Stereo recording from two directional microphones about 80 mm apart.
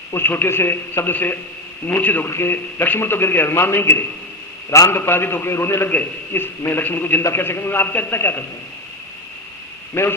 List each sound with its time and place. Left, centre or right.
0.1 s a man's voice: left
9.9 s a man's voice: left